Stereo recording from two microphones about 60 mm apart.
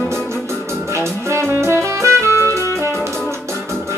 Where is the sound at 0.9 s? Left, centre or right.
Right.